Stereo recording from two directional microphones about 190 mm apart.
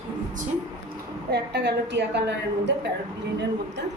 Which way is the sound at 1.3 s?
65° right (ahead or behind).